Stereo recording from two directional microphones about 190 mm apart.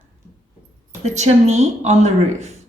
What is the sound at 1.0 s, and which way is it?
A woman's voice, 35° right (ahead or behind).